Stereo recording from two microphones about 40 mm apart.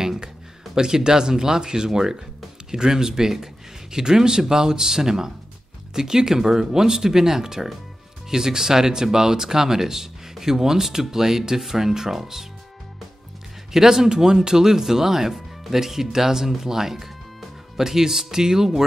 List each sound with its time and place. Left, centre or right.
0.0 s a sound: centre
0.7 s speech: centre
13.7 s speech: centre